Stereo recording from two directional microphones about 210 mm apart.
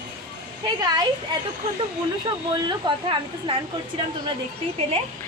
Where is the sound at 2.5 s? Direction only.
20° right (ahead or behind).